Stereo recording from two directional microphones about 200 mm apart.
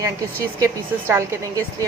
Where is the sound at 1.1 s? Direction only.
15° right (ahead or behind).